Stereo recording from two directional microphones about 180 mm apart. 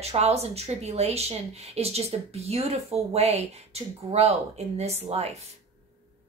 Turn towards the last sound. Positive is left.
turn(degrees=-35)  # may be behind; listen again after turning